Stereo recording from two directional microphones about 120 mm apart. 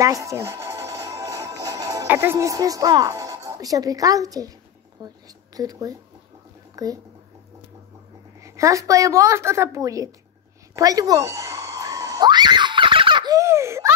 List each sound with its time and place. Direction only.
0.0 s music: 25° right (ahead or behind)
2.0 s a woman's voice: 20° right (ahead or behind)
6.7 s a sound: 30° right (ahead or behind)
8.4 s a woman's voice: 25° right (ahead or behind)
10.7 s screaming: 30° right (ahead or behind); by 13.3 s 45° right (ahead or behind)
13.3 s baby laughter: 25° right (ahead or behind)